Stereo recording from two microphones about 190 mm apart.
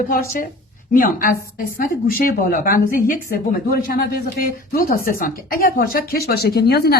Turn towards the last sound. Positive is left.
turn(degrees=60)  # may be behind; listen again after turning